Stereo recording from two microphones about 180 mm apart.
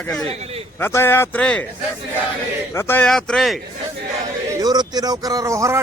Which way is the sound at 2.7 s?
10° left (ahead or behind).